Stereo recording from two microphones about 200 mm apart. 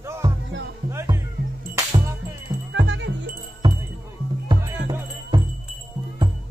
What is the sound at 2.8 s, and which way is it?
Music, 70° right (ahead or behind).